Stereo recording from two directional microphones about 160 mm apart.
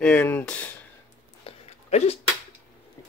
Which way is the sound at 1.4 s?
40° left (ahead or behind).